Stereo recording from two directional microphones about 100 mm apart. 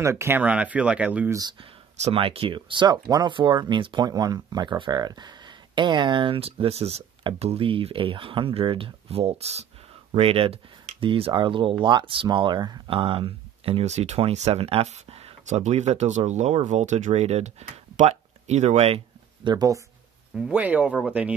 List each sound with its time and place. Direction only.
0.0 s speech: 25° right (ahead or behind)
0.4 s speech: 15° right (ahead or behind)
1.6 s speech: 80° right
10.1 s speech: 75° right (ahead or behind); by 12.9 s 45° right (ahead or behind)
12.9 s speech: 65° right (ahead or behind); by 19.0 s 90° right
19.4 s speech: 40° right (ahead or behind)
20.3 s speech: 10° right (ahead or behind)